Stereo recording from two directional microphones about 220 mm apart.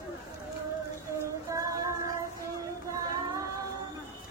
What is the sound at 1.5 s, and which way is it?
Child singing, 15° right (ahead or behind).